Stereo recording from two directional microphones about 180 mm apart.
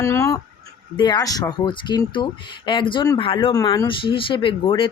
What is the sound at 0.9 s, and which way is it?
Speech, 25° left (ahead or behind).